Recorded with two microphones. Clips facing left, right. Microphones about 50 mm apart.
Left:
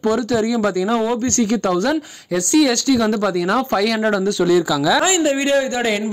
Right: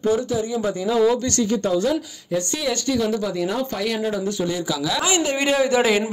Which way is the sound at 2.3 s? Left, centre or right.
Left.